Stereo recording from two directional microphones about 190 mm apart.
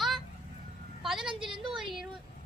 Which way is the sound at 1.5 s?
25° right (ahead or behind).